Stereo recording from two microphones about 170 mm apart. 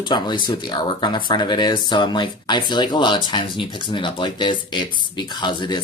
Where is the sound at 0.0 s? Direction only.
30° left (ahead or behind).